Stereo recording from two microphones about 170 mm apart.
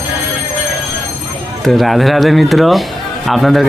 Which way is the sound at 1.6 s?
Centre (ahead or behind).